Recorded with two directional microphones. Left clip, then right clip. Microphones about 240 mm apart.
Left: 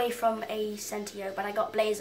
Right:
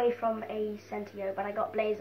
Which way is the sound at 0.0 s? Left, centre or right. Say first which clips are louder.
Left 1 dB; left.